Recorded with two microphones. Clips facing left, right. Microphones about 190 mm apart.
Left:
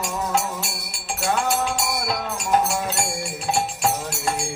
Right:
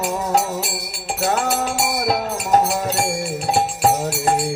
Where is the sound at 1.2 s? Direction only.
40° right (ahead or behind).